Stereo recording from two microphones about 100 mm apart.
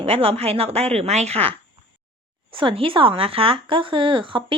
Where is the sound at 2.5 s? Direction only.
60° right (ahead or behind).